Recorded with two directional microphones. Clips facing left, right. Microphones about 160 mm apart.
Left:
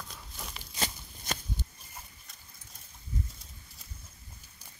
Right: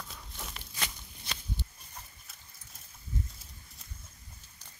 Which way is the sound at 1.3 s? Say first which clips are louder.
Left 6 dB; 45° left (ahead or behind).